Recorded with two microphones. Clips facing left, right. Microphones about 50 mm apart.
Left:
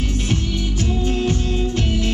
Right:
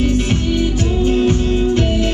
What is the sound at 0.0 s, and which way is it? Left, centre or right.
Music, right.